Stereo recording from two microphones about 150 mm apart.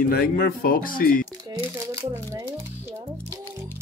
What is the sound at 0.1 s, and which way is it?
Speech, 90° left.